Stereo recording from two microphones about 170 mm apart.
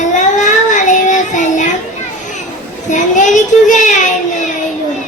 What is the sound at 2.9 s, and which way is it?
A child's voice, 45° left (ahead or behind).